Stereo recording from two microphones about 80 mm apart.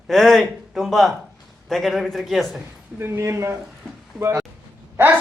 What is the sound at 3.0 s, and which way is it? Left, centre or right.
Speech, right.